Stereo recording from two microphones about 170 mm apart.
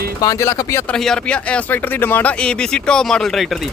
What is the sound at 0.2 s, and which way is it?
Speech, 20° left (ahead or behind).